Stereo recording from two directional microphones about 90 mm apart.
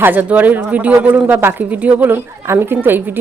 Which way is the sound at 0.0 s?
20° right (ahead or behind).